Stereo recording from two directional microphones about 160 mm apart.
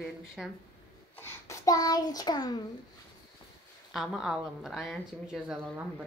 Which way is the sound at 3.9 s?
Centre (ahead or behind).